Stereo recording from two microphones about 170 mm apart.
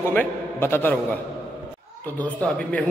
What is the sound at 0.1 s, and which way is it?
Speech, 10° left (ahead or behind).